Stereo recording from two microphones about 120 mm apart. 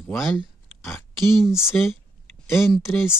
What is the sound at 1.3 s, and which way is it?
Speech, 5° right (ahead or behind).